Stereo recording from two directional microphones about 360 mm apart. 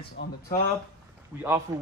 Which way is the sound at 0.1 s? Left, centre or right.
Left.